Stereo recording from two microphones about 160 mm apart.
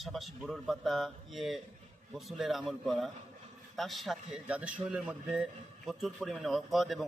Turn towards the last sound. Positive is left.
turn(degrees=0)  # may be behind; listen again after turning